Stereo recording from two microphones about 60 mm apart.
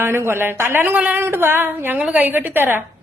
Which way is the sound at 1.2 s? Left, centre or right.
Right.